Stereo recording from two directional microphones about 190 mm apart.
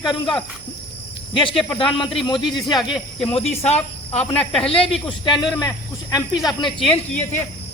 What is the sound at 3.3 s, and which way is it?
Speech, 35° left (ahead or behind).